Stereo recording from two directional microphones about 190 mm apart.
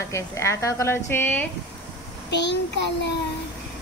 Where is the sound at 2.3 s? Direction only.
65° left (ahead or behind).